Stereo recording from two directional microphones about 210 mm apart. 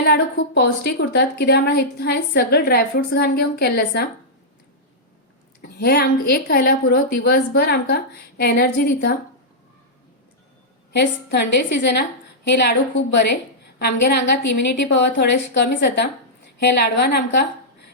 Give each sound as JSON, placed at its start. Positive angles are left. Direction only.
{"t": 0.0, "sound": "a woman's voice", "side_deg": 50}
{"t": 5.6, "sound": "a woman's voice", "side_deg": 50}
{"t": 10.9, "sound": "a woman's voice", "side_deg": 55}